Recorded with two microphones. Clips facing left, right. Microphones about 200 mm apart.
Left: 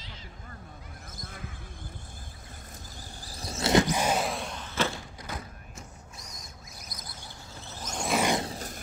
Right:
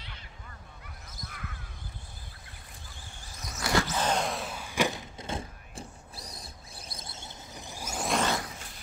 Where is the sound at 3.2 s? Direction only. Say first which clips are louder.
Left 5 dB; 30° left (ahead or behind); by 8.1 s 5° right (ahead or behind).